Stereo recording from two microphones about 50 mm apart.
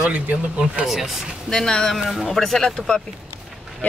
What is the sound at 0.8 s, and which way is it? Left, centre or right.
Speech, centre.